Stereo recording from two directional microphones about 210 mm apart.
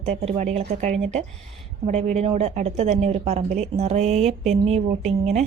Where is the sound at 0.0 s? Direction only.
30° right (ahead or behind).